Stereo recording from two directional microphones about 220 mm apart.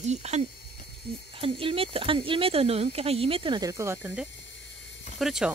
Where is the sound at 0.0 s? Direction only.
30° right (ahead or behind).